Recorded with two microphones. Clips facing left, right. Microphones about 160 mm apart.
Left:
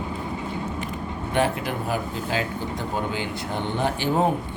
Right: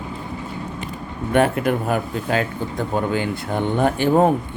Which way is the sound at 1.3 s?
55° right (ahead or behind).